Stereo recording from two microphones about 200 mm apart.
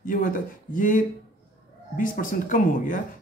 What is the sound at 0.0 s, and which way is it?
Speech, 45° left (ahead or behind).